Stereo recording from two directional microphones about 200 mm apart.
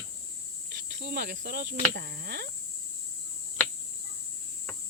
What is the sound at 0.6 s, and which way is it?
Cricket, 55° right (ahead or behind).